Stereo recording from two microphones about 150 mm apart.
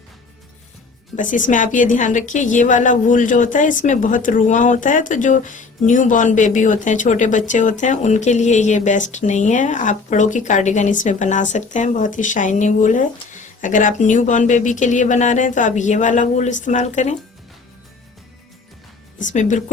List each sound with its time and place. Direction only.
1.1 s a woman's voice: 60° left (ahead or behind)
19.2 s a woman's voice: 55° left (ahead or behind)